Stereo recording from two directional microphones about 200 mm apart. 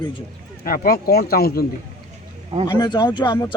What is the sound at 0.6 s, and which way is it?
Speech, 45° left (ahead or behind).